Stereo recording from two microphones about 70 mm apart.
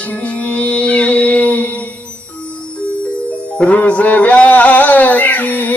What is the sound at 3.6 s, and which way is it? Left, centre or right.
Music, centre.